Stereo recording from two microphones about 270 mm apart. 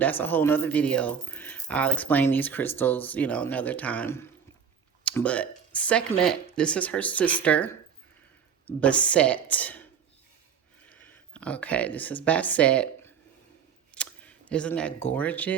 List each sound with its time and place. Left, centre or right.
0.0 s speech: centre
10.8 s speech: centre